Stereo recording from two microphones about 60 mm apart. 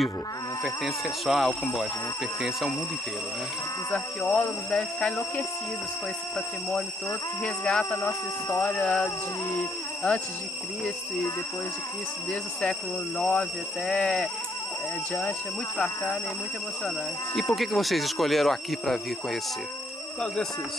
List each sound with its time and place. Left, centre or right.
0.7 s speech: centre
4.2 s speech: left
4.6 s speech: centre
7.4 s speech: centre
13.2 s speech: centre
17.6 s speech: centre